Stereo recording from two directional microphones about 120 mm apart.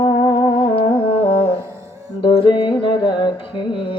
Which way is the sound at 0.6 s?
50° left (ahead or behind).